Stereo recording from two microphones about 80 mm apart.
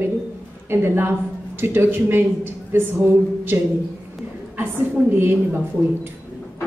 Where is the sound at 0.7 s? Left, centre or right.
Right.